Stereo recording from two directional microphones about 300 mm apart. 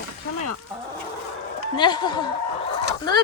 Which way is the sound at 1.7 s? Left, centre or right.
Centre.